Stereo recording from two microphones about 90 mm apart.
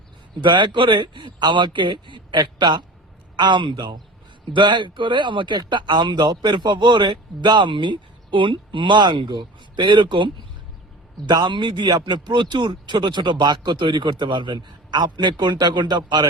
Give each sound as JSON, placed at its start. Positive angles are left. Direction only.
{"t": 0.4, "sound": "speech", "side_deg": -60}